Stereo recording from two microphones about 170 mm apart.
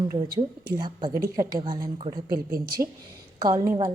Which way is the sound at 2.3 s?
65° right (ahead or behind).